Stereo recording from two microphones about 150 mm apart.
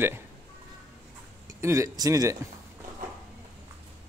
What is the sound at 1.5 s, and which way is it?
Speech, 20° right (ahead or behind).